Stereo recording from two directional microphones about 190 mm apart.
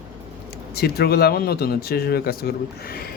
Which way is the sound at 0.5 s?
55° left (ahead or behind).